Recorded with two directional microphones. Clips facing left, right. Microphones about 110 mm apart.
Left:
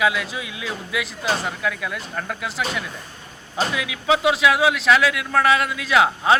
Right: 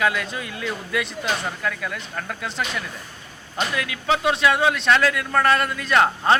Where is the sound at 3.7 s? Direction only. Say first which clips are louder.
Left 2 dB; 5° left (ahead or behind).